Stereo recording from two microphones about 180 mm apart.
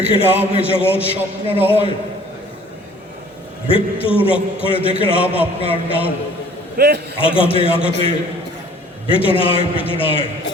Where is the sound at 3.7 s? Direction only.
30° left (ahead or behind).